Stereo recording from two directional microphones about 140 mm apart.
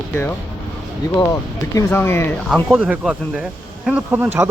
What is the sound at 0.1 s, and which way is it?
Speech, 15° left (ahead or behind).